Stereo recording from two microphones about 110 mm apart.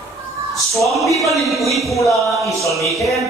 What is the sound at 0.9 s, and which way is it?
Speech, centre (ahead or behind).